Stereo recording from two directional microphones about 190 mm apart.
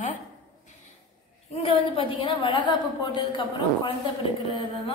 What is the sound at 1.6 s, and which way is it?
A woman's voice, 30° left (ahead or behind).